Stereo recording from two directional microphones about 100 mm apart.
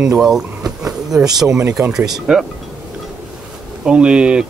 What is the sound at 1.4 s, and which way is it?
Speech, 25° right (ahead or behind).